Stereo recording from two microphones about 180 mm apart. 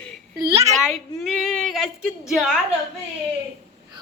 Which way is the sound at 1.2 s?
5° left (ahead or behind).